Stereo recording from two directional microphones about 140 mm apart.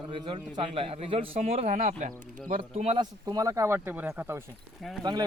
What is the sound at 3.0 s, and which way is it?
Speech, 25° right (ahead or behind).